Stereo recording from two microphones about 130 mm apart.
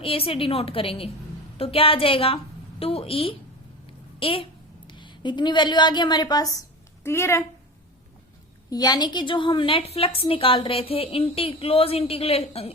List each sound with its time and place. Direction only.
0.0 s a woman's voice: 45° left (ahead or behind); by 7.4 s 20° left (ahead or behind)
8.7 s a woman's voice: 30° left (ahead or behind); by 12.7 s 50° left (ahead or behind)